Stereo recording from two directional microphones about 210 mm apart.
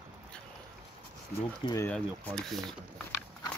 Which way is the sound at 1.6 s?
10° left (ahead or behind).